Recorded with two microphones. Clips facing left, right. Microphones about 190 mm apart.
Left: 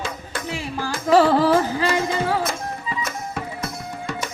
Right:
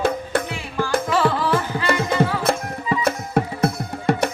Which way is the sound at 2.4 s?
60° right (ahead or behind).